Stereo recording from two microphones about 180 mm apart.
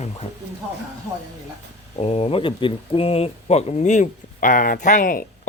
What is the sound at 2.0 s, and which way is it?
Speech, 35° left (ahead or behind).